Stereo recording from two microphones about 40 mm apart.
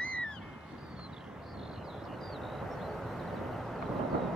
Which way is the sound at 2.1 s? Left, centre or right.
Centre.